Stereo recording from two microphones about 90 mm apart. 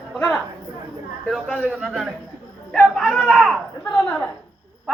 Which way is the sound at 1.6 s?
10° right (ahead or behind).